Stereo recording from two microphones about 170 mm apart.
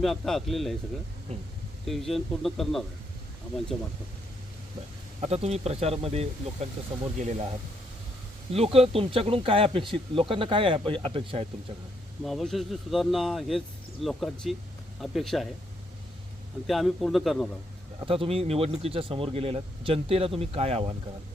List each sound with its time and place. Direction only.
0.0 s speech: centre (ahead or behind)
1.9 s speech: centre (ahead or behind)
5.2 s speech: 40° right (ahead or behind)
8.5 s speech: 35° right (ahead or behind)
12.2 s speech: centre (ahead or behind)
16.6 s speech: centre (ahead or behind)
18.0 s speech: 30° right (ahead or behind)